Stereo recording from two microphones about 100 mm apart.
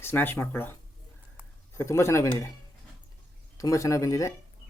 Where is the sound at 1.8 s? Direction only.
30° left (ahead or behind).